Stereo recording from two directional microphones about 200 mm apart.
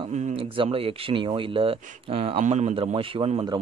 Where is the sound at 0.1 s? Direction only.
35° right (ahead or behind).